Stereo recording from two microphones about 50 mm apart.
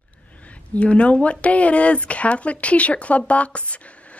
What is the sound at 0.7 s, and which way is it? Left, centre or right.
A woman's voice, left.